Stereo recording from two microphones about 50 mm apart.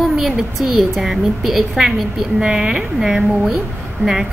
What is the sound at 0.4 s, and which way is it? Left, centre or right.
A woman's voice, centre.